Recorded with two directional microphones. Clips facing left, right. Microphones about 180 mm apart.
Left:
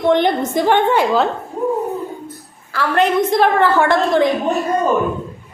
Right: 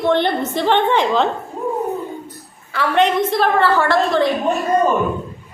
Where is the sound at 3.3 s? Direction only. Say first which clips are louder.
Left 2 dB; 15° left (ahead or behind).